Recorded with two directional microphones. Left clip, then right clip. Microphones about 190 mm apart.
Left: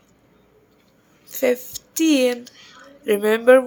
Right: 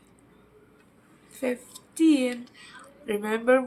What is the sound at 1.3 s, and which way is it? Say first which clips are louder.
Speech: left 10 dB; 55° left (ahead or behind).